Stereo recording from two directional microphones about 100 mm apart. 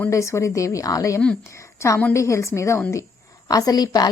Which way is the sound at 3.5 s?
40° left (ahead or behind).